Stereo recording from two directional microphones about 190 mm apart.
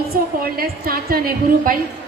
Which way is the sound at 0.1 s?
50° right (ahead or behind).